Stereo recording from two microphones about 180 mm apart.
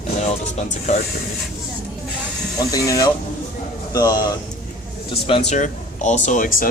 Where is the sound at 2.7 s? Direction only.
20° left (ahead or behind).